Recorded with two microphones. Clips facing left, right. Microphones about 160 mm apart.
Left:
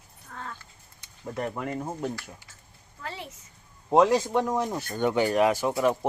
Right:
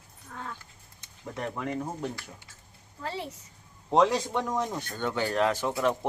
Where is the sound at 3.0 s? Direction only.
35° right (ahead or behind).